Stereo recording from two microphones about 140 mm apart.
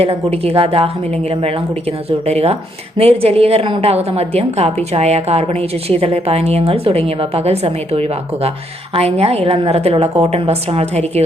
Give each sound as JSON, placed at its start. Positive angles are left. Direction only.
{"t": 0.0, "sound": "a woman's voice", "side_deg": -45}
{"t": 2.0, "sound": "a woman's voice", "side_deg": -50}